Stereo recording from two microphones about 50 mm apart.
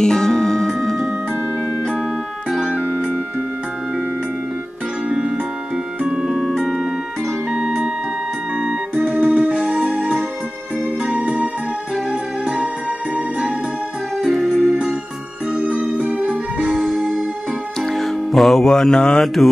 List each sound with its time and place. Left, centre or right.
0.0 s music: centre
2.8 s music: centre
5.1 s music: centre
7.5 s music: centre
8.5 s organ: centre
9.8 s music: right
14.1 s keyboard: centre
14.6 s music: centre
15.5 s music: right
16.7 s music: centre
19.2 s music: centre